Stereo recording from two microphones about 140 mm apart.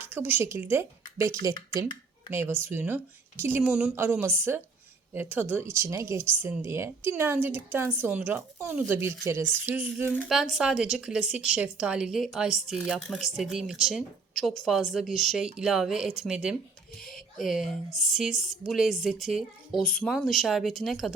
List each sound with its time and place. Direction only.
0.0 s speech: 15° right (ahead or behind)
3.6 s speech: 5° right (ahead or behind)
3.9 s speech: 15° right (ahead or behind)